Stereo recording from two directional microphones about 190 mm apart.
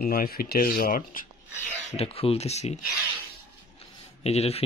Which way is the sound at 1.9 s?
30° left (ahead or behind).